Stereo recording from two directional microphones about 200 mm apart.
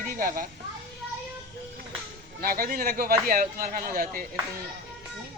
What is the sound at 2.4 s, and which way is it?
Speech, 45° right (ahead or behind).